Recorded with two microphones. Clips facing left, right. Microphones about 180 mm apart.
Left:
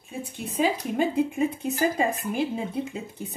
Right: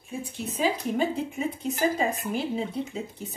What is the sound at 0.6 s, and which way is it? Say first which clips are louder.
Speech: left 2 dB; 50° left (ahead or behind).